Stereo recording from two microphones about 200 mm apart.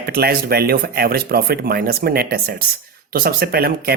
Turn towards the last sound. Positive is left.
turn(degrees=-50)  # may be behind; listen again after turning